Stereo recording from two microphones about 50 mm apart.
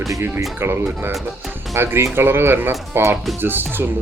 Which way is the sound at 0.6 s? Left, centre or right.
Right.